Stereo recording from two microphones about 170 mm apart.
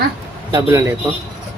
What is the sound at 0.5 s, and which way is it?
Speech, 15° right (ahead or behind).